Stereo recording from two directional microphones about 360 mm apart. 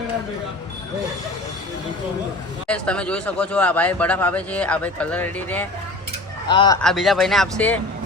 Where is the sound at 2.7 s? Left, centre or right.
Centre.